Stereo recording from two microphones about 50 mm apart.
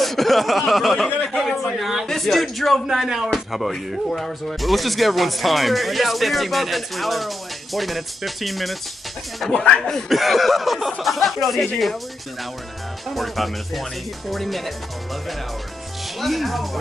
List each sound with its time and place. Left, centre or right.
0.0 s speech: centre
1.5 s a sound: centre
1.8 s a sound: centre
2.0 s speech: centre
13.1 s speech: centre
16.2 s speech: centre